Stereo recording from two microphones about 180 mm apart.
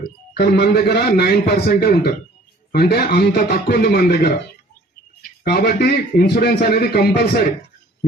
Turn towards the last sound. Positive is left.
turn(degrees=60)  # may be behind; listen again after turning